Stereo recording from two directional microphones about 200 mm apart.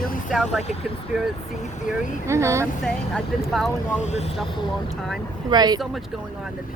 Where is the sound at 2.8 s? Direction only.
Centre (ahead or behind).